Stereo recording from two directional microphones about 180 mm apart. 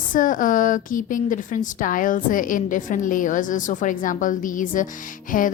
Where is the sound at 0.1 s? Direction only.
50° left (ahead or behind).